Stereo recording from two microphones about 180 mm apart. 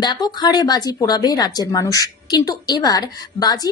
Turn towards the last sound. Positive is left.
turn(degrees=20)  # may be behind; listen again after turning